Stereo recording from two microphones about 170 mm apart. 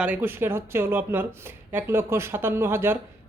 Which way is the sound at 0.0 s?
10° right (ahead or behind).